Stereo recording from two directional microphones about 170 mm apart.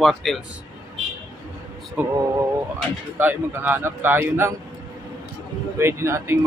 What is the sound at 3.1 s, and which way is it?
A man's voice, 10° right (ahead or behind).